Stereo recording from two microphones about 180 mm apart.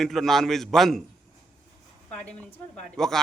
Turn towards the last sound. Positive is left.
turn(degrees=5)  # may be behind; listen again after turning